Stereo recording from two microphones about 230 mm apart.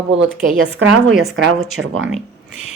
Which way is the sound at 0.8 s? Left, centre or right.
Right.